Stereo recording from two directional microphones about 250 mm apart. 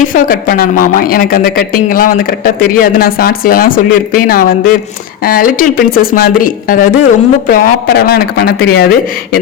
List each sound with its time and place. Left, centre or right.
0.1 s speech: left